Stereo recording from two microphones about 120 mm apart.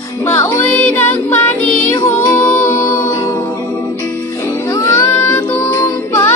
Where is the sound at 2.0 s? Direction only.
20° left (ahead or behind).